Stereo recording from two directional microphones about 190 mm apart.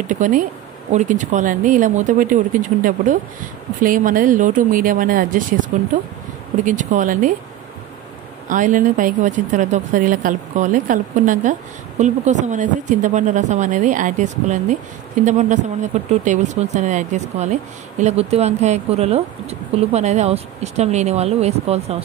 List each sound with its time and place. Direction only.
0.0 s speech: 45° right (ahead or behind)
6.6 s speech: 40° right (ahead or behind)
8.5 s speech: 40° right (ahead or behind)